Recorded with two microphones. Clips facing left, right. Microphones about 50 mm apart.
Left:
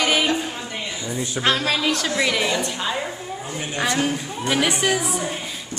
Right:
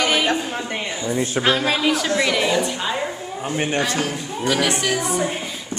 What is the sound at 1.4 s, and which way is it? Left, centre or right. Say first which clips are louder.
A woman's voice: right 1 dB; centre.